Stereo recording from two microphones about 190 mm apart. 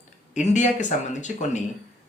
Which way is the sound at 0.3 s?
40° left (ahead or behind).